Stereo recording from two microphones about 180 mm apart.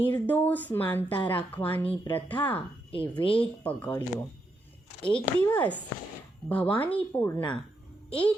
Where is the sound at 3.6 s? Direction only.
10° left (ahead or behind).